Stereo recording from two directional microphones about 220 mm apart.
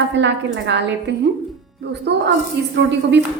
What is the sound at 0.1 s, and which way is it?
A woman's voice, 55° right (ahead or behind).